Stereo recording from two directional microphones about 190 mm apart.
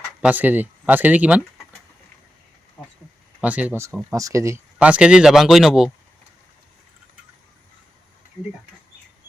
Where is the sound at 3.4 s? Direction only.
5° right (ahead or behind).